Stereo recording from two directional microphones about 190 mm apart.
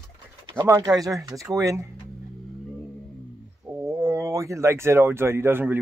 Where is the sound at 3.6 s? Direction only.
10° right (ahead or behind).